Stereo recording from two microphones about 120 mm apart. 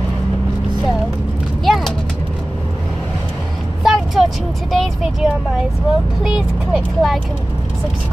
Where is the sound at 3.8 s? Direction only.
Centre (ahead or behind).